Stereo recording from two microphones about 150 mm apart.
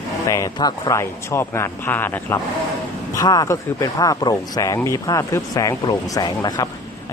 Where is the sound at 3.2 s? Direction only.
25° left (ahead or behind).